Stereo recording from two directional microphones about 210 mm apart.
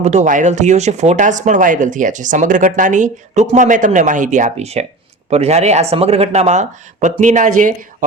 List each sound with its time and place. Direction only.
0.0 s speech: 35° right (ahead or behind)